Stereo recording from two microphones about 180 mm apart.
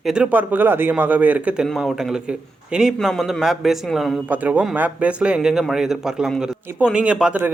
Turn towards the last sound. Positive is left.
turn(degrees=-10)  # may be behind; listen again after turning